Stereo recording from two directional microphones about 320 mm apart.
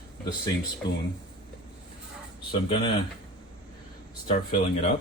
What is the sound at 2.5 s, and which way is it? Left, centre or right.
Speech, centre.